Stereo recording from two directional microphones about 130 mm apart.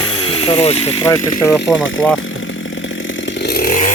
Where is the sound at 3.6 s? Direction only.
85° left.